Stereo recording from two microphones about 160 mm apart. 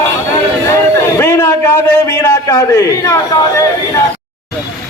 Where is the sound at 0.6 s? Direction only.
20° left (ahead or behind).